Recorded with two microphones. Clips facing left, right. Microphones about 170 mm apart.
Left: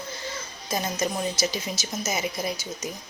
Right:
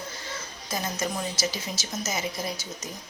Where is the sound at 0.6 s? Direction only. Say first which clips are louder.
Left 3 dB; 20° left (ahead or behind).